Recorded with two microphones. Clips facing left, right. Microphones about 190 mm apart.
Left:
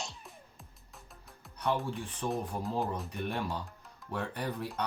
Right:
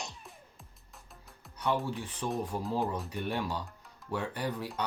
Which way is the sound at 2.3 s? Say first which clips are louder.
Right 2 dB; centre (ahead or behind).